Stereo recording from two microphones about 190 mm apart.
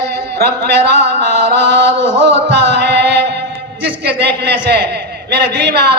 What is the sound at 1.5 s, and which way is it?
Chant, 65° right (ahead or behind).